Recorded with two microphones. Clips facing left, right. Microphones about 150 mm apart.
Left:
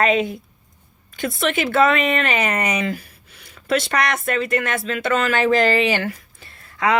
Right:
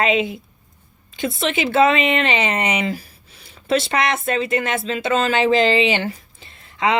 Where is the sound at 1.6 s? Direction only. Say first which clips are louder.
Right 2 dB; 25° right (ahead or behind).